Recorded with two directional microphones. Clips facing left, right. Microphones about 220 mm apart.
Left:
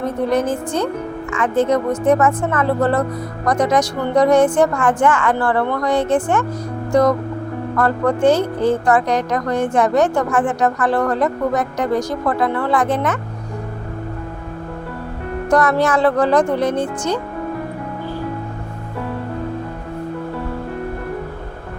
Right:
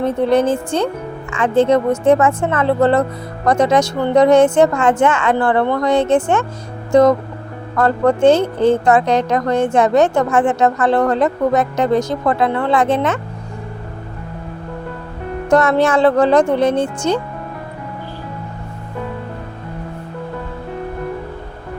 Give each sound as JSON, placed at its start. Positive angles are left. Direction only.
{"t": 0.0, "sound": "a woman's voice", "side_deg": -30}
{"t": 15.4, "sound": "a woman's voice", "side_deg": -25}